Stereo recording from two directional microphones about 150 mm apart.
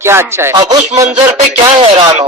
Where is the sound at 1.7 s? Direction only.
35° right (ahead or behind).